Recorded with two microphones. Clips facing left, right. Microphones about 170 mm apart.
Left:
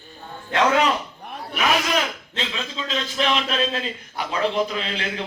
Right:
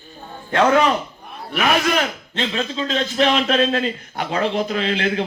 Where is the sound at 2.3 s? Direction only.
45° right (ahead or behind).